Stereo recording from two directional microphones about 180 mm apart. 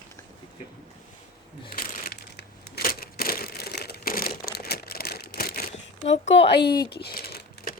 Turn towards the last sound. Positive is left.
turn(degrees=55)  # may be behind; listen again after turning